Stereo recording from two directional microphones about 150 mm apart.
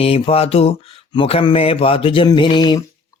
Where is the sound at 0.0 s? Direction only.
40° left (ahead or behind).